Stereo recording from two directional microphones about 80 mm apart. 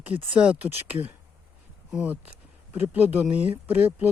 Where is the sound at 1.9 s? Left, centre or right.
Right.